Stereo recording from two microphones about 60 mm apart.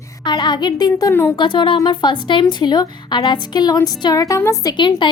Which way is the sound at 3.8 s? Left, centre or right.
Left.